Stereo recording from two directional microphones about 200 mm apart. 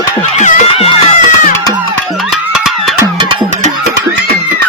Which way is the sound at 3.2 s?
25° right (ahead or behind).